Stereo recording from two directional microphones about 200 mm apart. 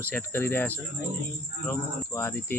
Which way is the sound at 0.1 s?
10° left (ahead or behind).